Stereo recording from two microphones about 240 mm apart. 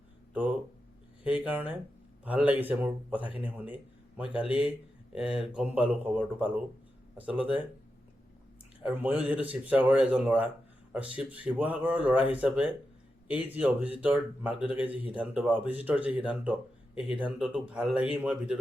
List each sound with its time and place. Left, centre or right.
1.2 s speech: centre
4.4 s speech: left
5.1 s speech: centre
8.8 s speech: centre